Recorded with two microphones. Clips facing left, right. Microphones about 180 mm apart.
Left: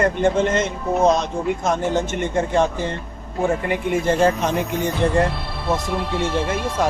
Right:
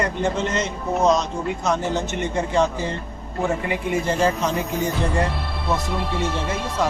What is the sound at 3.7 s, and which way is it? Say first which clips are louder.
Speech: left 3 dB; 55° left (ahead or behind).